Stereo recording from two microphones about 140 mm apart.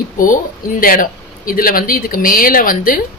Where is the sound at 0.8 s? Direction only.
90° left.